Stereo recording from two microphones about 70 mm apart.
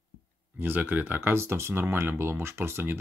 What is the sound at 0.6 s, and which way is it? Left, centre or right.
Speech, right.